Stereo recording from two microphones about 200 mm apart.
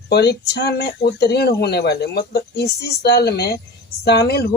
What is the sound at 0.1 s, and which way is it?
Speech, 55° left (ahead or behind).